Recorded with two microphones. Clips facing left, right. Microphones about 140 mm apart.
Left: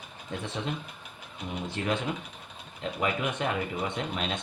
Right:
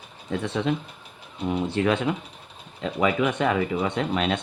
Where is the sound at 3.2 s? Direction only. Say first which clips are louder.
Right 7 dB; 90° right.